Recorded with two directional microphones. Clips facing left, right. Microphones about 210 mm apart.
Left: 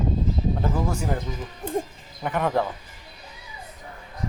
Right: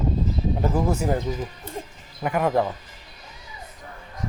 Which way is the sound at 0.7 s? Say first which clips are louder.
Right 4 dB; 20° right (ahead or behind).